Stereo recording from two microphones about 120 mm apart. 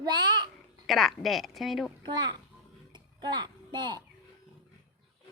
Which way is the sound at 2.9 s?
35° right (ahead or behind).